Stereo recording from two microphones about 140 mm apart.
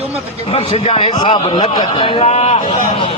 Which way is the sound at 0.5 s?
45° left (ahead or behind).